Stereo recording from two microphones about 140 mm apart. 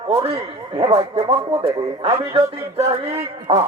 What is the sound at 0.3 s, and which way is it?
A man's voice, 45° right (ahead or behind).